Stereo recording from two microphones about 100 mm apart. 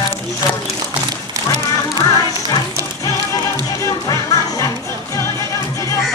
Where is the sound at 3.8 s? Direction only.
30° left (ahead or behind).